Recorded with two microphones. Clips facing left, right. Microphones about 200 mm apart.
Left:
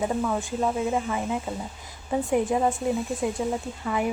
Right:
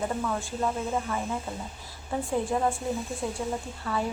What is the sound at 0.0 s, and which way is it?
Speech, 15° left (ahead or behind).